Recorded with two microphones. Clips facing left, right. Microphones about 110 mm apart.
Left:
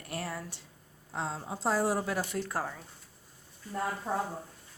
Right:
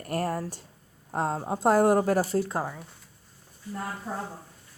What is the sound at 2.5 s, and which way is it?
Speech, 15° right (ahead or behind).